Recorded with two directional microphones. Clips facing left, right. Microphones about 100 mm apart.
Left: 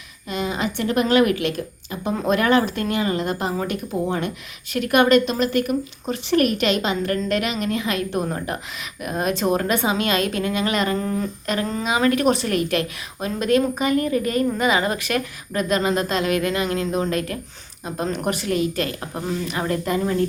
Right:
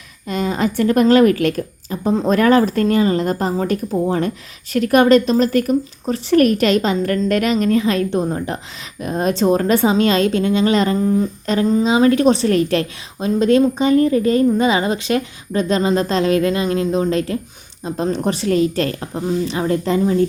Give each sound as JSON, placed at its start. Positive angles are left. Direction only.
{"t": 0.3, "sound": "a woman's voice", "side_deg": -40}